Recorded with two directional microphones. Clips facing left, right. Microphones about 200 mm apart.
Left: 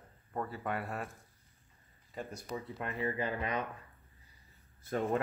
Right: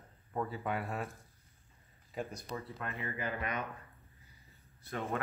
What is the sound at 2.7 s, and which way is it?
Speech, 30° left (ahead or behind).